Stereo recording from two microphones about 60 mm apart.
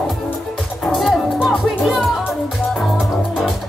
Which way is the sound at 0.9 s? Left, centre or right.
Centre.